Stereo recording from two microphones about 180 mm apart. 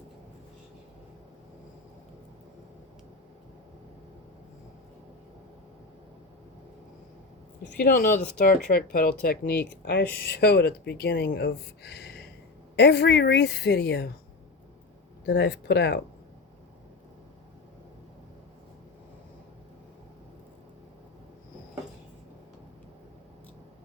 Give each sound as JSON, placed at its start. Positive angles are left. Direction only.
{"t": 7.6, "sound": "a woman's voice", "side_deg": 65}
{"t": 15.3, "sound": "a woman's voice", "side_deg": 70}